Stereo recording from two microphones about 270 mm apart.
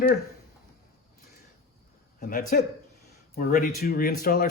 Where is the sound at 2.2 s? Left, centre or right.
Left.